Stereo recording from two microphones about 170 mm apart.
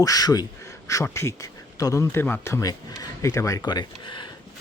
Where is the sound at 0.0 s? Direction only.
20° left (ahead or behind).